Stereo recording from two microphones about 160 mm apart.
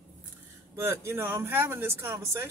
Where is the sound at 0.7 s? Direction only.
15° right (ahead or behind).